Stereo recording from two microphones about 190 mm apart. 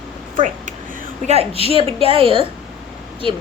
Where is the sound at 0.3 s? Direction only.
40° right (ahead or behind).